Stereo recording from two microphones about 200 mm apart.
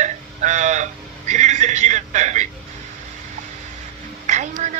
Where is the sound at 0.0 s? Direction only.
35° right (ahead or behind).